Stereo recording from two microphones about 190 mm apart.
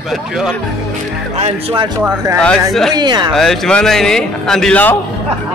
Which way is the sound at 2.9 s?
20° right (ahead or behind).